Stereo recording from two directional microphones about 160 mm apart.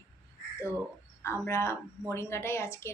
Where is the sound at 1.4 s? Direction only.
15° left (ahead or behind).